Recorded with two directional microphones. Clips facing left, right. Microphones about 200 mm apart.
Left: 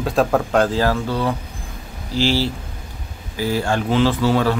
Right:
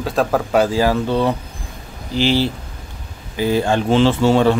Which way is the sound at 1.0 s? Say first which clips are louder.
Right 4 dB; 25° right (ahead or behind).